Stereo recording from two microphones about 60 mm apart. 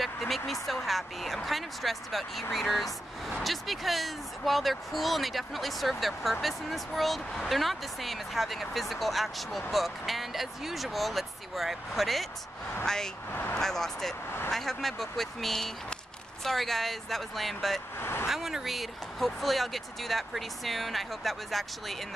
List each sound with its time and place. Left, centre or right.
0.0 s a sound: centre
0.5 s speech: centre
13.3 s speech: left
13.6 s speech: centre
17.9 s speech: left
18.3 s speech: centre